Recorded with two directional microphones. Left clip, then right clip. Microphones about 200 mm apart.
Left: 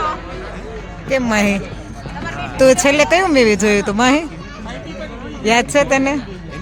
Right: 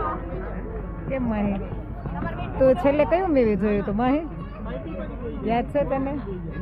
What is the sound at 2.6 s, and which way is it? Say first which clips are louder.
Speech: left 8 dB; 30° left (ahead or behind).